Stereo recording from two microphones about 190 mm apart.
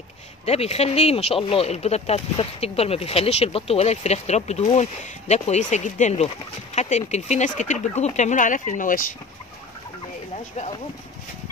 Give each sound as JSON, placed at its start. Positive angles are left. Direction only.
{"t": 0.5, "sound": "speech", "side_deg": 35}